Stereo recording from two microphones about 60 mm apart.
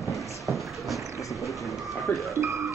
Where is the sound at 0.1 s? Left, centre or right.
Centre.